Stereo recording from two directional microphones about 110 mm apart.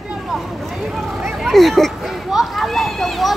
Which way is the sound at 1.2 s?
Centre (ahead or behind).